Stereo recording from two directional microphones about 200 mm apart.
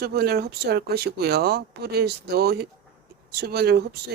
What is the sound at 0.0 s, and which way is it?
Speech, 50° right (ahead or behind).